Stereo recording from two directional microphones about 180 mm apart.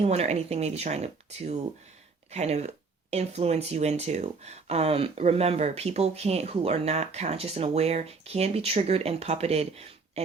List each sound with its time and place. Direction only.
0.0 s speech: 35° right (ahead or behind)